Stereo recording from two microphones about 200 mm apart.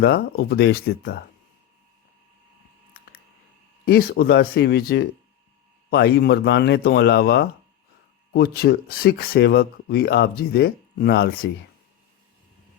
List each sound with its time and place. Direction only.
0.0 s speech: 50° left (ahead or behind)
3.8 s speech: 50° left (ahead or behind)